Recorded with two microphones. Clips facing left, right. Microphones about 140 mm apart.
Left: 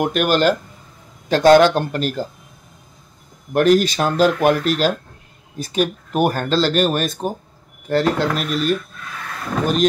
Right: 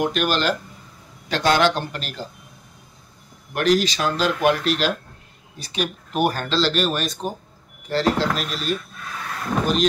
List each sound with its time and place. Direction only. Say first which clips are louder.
0.0 s speech: left 5 dB; 50° left (ahead or behind)
3.5 s speech: left 5 dB; 50° left (ahead or behind)